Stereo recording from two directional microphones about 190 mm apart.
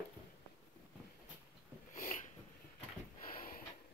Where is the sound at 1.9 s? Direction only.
40° left (ahead or behind).